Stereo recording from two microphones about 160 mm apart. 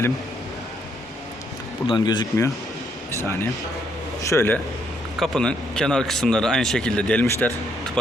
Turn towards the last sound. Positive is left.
turn(degrees=5)  # may be behind; listen again after turning